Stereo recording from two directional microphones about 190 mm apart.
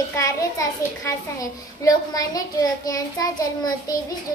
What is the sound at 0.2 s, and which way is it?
A child's voice, 20° left (ahead or behind).